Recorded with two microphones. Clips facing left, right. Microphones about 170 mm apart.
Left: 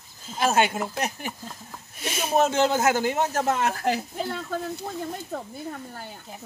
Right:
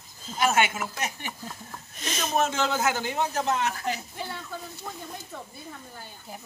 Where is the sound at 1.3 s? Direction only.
5° left (ahead or behind).